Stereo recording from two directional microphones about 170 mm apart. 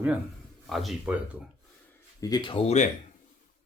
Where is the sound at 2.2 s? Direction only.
25° left (ahead or behind).